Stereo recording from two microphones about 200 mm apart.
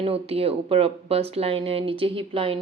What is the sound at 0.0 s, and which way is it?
Speech, 30° right (ahead or behind).